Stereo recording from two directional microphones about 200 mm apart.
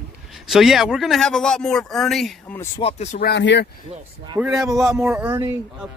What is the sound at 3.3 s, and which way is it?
Speech, 60° left (ahead or behind).